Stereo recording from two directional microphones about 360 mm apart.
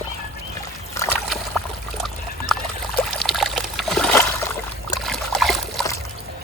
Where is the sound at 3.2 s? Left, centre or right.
Centre.